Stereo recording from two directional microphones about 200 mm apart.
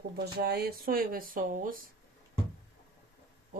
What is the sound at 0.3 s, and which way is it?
Speech, 55° right (ahead or behind).